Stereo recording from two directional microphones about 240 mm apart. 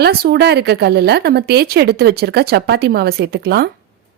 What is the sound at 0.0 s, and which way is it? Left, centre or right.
Speech, right.